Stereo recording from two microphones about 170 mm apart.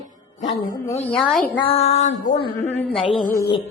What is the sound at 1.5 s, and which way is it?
Music, 30° left (ahead or behind).